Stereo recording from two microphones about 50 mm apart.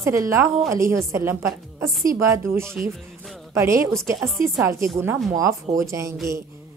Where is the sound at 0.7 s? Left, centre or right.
Right.